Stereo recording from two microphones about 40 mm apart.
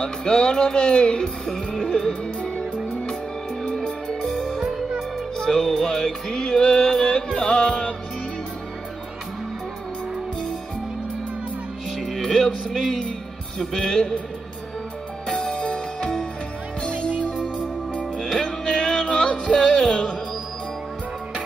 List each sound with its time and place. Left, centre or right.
0.0 s music: left
2.7 s music: left
3.7 s music: centre
12.0 s speech: centre
13.7 s music: centre
15.2 s music: centre
18.1 s music: centre
19.4 s music: centre